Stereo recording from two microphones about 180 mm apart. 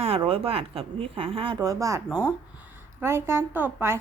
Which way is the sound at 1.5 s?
20° right (ahead or behind).